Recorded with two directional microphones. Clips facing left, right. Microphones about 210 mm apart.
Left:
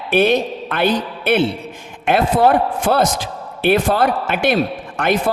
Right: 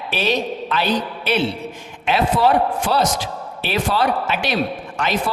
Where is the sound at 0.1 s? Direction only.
55° left (ahead or behind).